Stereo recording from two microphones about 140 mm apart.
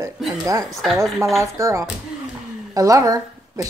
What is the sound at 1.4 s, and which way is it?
A woman's voice, 20° right (ahead or behind).